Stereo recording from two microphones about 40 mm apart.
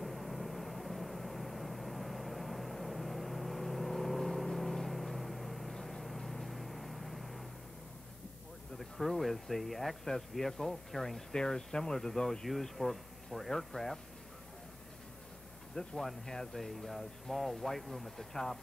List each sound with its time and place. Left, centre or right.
0.0 s vehicle: centre
8.7 s speech: centre
15.7 s speech: centre
16.0 s speech: centre